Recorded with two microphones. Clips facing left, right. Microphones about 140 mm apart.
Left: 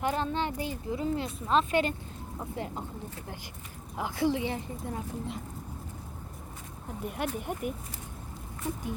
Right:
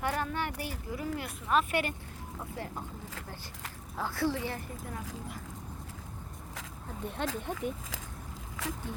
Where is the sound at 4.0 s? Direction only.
20° left (ahead or behind).